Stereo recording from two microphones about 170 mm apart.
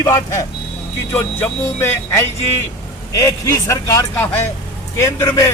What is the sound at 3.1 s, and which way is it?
A man's voice, 20° left (ahead or behind).